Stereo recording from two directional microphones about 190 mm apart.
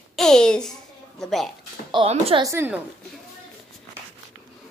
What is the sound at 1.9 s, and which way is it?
Child singing, 30° right (ahead or behind).